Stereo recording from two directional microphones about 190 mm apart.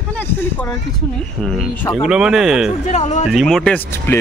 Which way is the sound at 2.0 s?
5° right (ahead or behind).